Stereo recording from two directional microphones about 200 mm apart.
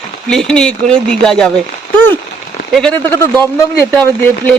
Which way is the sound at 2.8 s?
5° left (ahead or behind).